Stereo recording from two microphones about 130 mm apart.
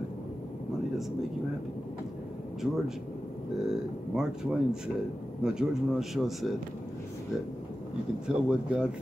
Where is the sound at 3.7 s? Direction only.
5° right (ahead or behind).